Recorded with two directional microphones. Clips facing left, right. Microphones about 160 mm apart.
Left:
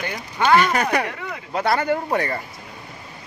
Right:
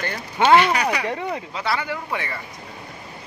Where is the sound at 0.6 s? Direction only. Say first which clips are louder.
Left 1 dB; 45° left (ahead or behind).